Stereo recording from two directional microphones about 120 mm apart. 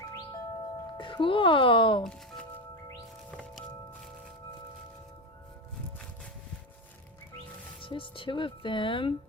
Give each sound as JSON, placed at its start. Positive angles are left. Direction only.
{"t": 0.9, "sound": "speech", "side_deg": 45}
{"t": 2.0, "sound": "music", "side_deg": 5}
{"t": 7.8, "sound": "speech", "side_deg": 45}